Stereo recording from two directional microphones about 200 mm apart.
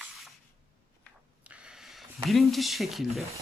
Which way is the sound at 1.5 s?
5° right (ahead or behind).